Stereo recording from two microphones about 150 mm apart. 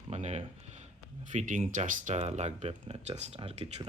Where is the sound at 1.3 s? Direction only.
60° right (ahead or behind); by 3.6 s 45° right (ahead or behind).